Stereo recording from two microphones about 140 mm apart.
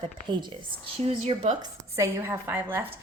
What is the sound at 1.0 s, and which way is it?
Speech, 50° right (ahead or behind).